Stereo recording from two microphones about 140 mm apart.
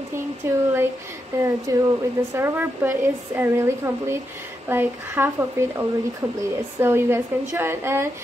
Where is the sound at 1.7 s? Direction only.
25° right (ahead or behind).